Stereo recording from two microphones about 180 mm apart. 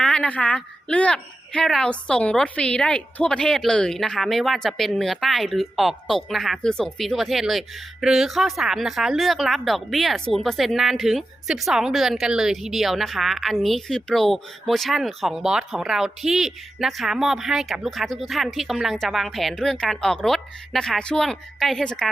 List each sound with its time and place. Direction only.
0.0 s a woman's voice: 5° left (ahead or behind)